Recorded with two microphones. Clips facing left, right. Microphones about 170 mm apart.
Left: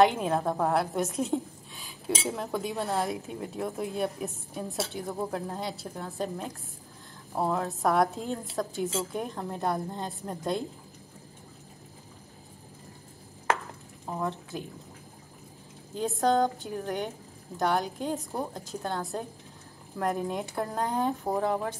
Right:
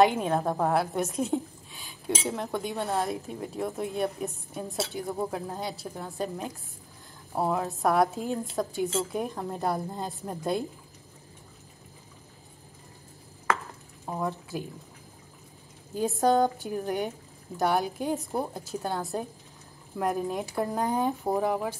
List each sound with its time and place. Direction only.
0.0 s a woman's voice: centre (ahead or behind)
14.0 s speech: 5° right (ahead or behind)
15.9 s a woman's voice: 10° right (ahead or behind)